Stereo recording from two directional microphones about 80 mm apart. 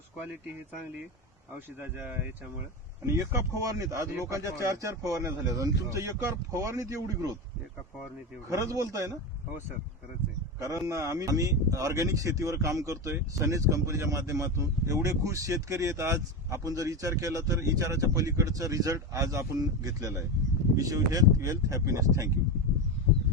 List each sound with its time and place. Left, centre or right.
1.5 s speech: right
3.1 s speech: right
8.4 s speech: right
10.6 s speech: right